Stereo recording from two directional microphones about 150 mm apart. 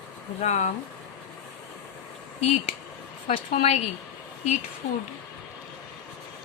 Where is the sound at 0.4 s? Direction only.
50° left (ahead or behind).